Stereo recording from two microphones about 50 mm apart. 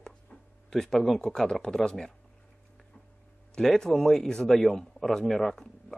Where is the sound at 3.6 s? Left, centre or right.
Centre.